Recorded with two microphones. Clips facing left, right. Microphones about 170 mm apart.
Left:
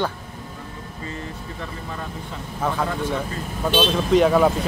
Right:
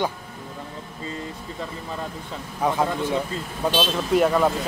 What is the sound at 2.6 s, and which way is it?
Speech, 20° right (ahead or behind).